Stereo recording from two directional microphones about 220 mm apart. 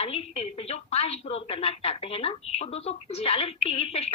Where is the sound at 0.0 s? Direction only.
25° left (ahead or behind).